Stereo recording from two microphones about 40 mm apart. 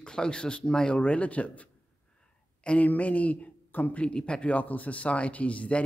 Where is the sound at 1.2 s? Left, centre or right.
Left.